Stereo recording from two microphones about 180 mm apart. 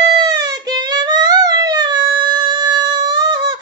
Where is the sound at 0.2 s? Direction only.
25° right (ahead or behind).